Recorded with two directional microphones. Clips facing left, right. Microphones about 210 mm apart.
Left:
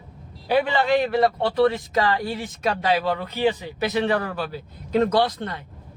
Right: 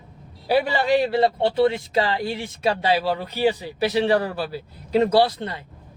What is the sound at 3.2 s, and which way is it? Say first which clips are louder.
Speech: even; 10° right (ahead or behind).